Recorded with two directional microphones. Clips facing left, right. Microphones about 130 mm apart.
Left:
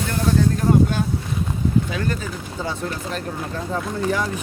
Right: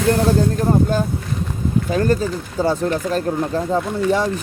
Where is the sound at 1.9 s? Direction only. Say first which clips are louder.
Right 8 dB; 40° right (ahead or behind).